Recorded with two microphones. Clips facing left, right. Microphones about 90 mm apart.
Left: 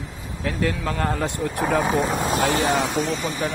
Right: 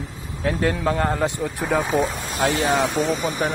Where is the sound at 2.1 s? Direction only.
65° left (ahead or behind).